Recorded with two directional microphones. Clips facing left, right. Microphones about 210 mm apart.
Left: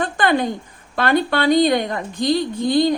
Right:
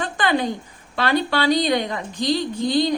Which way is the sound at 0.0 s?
55° left (ahead or behind).